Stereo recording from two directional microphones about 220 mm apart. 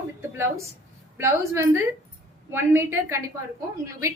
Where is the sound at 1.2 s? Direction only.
15° right (ahead or behind).